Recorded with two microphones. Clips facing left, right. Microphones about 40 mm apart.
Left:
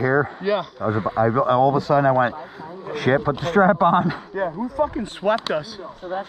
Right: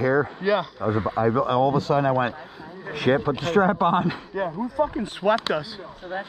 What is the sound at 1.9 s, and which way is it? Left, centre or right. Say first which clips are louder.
Speech: left 6 dB; centre.